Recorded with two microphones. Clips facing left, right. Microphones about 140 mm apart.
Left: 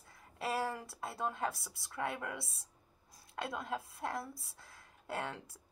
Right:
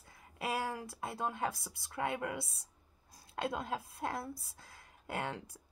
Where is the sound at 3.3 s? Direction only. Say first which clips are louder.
Right 2 dB; 25° right (ahead or behind).